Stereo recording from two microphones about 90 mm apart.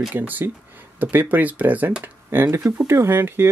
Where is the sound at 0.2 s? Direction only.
20° right (ahead or behind).